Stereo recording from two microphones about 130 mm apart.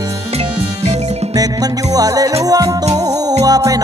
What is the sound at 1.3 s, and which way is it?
Music, 30° right (ahead or behind).